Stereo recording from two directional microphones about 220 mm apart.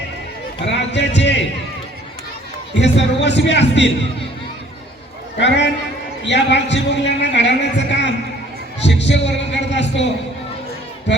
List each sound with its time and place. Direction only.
0.6 s speech: 55° left (ahead or behind)
2.7 s a man's voice: 55° left (ahead or behind)
5.4 s a man's voice: 50° left (ahead or behind)